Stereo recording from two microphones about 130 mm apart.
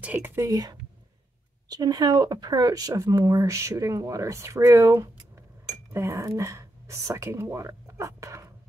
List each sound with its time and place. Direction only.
0.0 s speech: 10° right (ahead or behind)
0.4 s speech: 30° right (ahead or behind)